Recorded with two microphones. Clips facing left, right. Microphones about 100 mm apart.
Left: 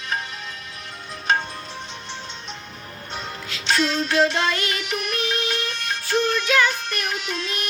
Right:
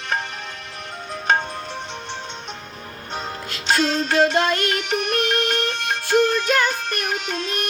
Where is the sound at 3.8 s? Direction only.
50° right (ahead or behind).